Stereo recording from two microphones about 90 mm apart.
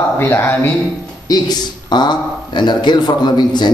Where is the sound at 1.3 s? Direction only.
50° left (ahead or behind).